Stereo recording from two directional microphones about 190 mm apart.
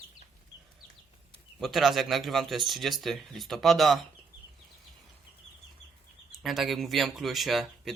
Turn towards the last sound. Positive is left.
turn(degrees=0)  # may be behind; listen again after turning